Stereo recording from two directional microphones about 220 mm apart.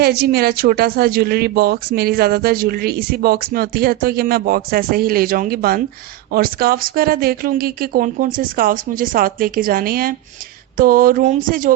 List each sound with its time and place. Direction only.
0.0 s speech: 45° right (ahead or behind)